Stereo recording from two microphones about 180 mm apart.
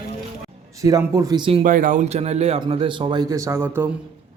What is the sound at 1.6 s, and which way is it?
A man's voice, 50° right (ahead or behind).